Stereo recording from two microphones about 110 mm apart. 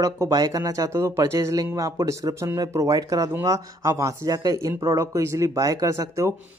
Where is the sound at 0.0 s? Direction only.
30° right (ahead or behind).